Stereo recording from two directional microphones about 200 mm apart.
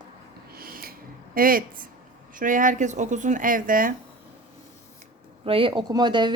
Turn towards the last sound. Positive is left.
turn(degrees=-25)  # may be behind; listen again after turning